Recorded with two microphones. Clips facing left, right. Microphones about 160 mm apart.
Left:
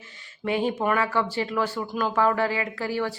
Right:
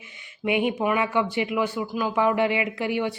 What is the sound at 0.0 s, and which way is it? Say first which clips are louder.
Speech: right 2 dB; 15° right (ahead or behind).